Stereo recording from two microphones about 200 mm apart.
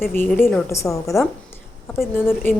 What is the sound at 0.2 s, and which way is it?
Speech, 10° left (ahead or behind).